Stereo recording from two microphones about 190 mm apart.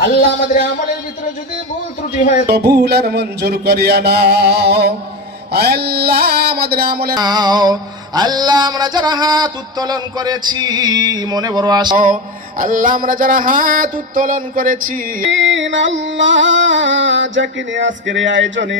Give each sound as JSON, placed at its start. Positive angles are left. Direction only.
{"t": 0.6, "sound": "a man's voice", "side_deg": 40}
{"t": 2.1, "sound": "music", "side_deg": 40}
{"t": 2.4, "sound": "speech", "side_deg": -55}
{"t": 7.2, "sound": "music", "side_deg": -20}
{"t": 12.0, "sound": "a sound", "side_deg": -45}
{"t": 15.3, "sound": "a sound", "side_deg": -75}